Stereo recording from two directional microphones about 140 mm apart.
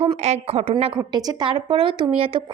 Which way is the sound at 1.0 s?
30° right (ahead or behind).